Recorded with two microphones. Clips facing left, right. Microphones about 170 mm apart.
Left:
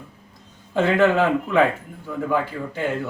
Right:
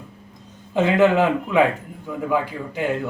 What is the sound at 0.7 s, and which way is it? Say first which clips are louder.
Speech: right 1 dB; 15° right (ahead or behind).